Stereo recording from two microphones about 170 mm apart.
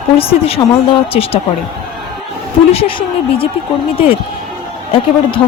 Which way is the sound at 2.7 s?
35° left (ahead or behind).